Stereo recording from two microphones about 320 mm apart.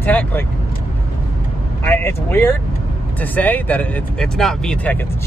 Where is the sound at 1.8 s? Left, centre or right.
Centre.